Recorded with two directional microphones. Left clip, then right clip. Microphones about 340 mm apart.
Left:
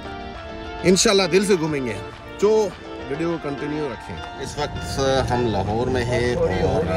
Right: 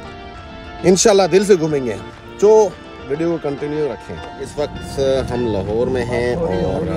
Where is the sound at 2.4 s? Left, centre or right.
Right.